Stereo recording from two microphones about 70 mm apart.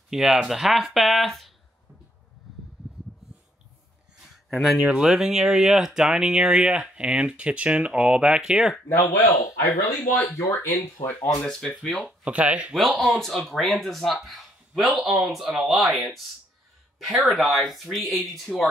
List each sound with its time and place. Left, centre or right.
0.1 s speech: centre
4.5 s speech: centre
9.1 s speech: left
9.7 s speech: left
11.4 s speech: centre
12.3 s speech: centre
12.7 s speech: centre